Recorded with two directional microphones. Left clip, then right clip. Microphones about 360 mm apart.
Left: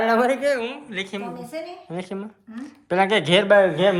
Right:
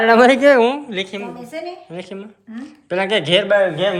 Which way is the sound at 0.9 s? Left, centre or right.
Centre.